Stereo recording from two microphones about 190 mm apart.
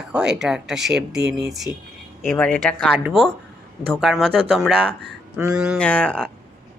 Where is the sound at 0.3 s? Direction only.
5° right (ahead or behind).